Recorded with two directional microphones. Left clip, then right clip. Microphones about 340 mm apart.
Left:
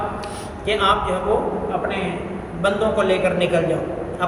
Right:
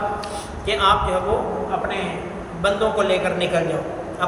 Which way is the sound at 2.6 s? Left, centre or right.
Centre.